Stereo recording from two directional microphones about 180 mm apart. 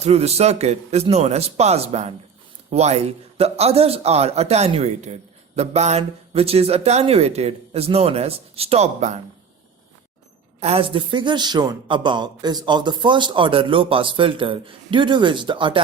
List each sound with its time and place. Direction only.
0.0 s a man's voice: 35° right (ahead or behind)
10.6 s speech: 35° right (ahead or behind)